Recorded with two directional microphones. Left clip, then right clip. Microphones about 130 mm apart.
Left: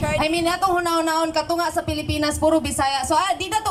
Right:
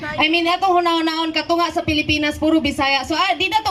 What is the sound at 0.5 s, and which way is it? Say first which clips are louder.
Speech: right 4 dB; 20° right (ahead or behind).